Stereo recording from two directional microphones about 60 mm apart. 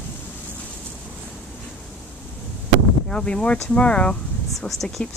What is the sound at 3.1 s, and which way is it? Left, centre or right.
Speech, centre.